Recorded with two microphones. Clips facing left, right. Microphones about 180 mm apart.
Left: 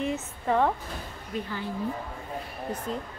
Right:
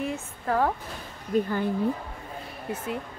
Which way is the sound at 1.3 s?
45° right (ahead or behind).